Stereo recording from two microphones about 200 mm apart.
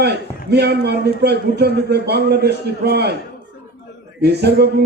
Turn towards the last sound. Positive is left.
turn(degrees=-55)  # may be behind; listen again after turning